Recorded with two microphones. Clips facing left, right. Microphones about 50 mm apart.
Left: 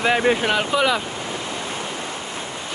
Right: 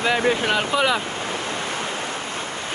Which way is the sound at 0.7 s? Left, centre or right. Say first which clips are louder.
Left 1 dB; centre.